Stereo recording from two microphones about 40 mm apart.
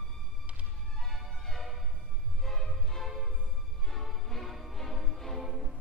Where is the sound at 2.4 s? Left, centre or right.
Centre.